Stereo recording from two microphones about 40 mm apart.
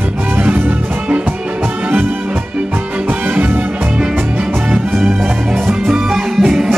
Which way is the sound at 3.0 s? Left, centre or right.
Right.